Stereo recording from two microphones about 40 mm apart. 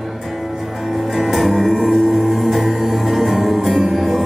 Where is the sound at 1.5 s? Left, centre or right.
Centre.